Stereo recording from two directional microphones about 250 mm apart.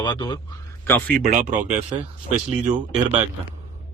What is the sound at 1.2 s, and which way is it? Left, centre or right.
Speech, right.